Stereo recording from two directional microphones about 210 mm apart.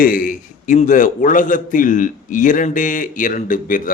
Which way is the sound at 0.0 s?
40° left (ahead or behind).